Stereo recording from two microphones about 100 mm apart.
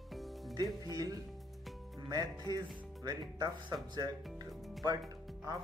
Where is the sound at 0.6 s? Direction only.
40° right (ahead or behind).